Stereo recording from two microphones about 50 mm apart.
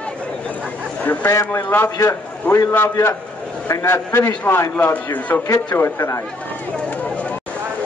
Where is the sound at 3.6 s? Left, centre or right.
Left.